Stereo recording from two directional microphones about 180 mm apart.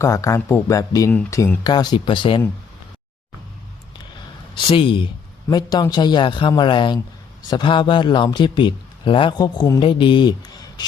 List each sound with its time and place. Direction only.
0.0 s a man's voice: 20° left (ahead or behind)
4.5 s a man's voice: 30° left (ahead or behind)